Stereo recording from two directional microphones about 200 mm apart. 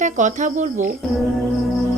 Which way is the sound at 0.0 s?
40° right (ahead or behind).